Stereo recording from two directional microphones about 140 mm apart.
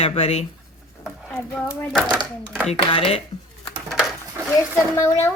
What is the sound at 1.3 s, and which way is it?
Speech, 15° left (ahead or behind).